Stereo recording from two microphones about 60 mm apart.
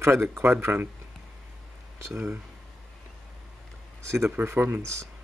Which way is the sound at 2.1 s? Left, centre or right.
Right.